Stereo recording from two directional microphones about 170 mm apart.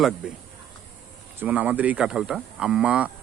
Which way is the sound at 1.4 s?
10° right (ahead or behind).